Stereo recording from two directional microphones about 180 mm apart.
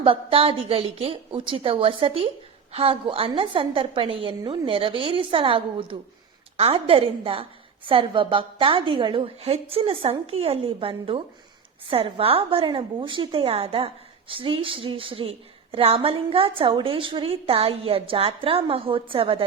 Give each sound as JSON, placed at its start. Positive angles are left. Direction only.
{"t": 0.0, "sound": "a woman's voice", "side_deg": -30}